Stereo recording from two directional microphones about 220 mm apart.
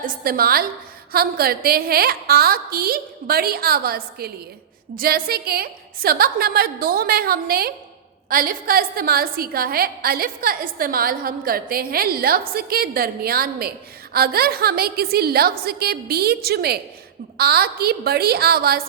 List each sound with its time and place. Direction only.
0.0 s a woman's voice: 40° right (ahead or behind)